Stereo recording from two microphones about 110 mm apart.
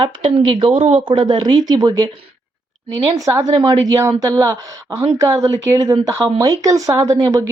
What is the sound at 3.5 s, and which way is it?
Speech, 40° right (ahead or behind).